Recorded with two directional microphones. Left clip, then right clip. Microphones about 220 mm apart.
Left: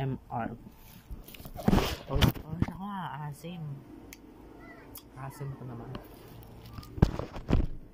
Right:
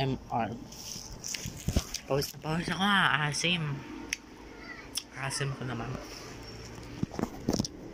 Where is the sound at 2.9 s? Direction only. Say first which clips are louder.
Right 13 dB; centre (ahead or behind).